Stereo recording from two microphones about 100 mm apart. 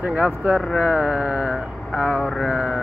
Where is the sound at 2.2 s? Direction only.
Centre (ahead or behind).